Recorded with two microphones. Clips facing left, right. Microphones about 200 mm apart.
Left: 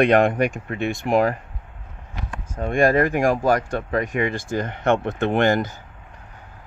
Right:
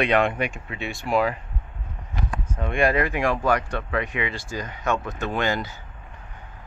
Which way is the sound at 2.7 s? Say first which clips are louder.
Left 4 dB; 45° left (ahead or behind).